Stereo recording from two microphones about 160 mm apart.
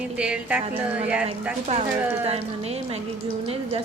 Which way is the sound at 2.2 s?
40° right (ahead or behind).